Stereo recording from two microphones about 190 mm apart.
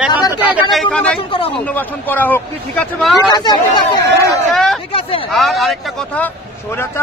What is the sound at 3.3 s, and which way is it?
Speech, 20° left (ahead or behind).